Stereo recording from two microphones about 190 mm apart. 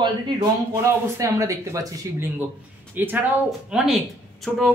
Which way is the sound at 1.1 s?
15° right (ahead or behind).